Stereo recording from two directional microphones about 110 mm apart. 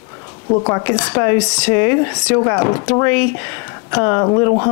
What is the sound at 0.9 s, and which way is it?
Speech, 20° left (ahead or behind).